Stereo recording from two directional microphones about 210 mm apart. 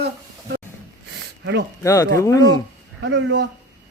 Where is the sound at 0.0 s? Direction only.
50° right (ahead or behind).